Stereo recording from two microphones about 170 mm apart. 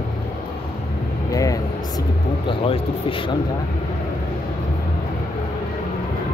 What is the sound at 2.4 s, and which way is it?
Speech, 30° left (ahead or behind).